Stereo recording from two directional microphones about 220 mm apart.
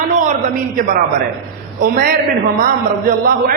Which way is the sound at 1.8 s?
40° right (ahead or behind).